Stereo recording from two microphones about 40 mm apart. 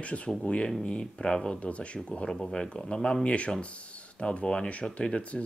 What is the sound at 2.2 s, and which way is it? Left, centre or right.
Speech, centre.